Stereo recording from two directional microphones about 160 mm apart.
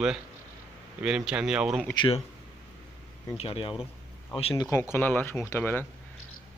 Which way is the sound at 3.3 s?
35° left (ahead or behind).